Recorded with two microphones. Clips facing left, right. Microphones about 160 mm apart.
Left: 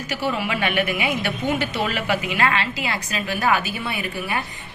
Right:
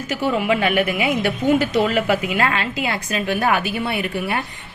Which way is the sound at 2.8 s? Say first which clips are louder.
Right 4 dB; 55° right (ahead or behind).